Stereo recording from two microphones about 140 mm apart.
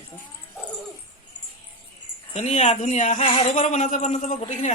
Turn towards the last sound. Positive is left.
turn(degrees=60)  # may be behind; listen again after turning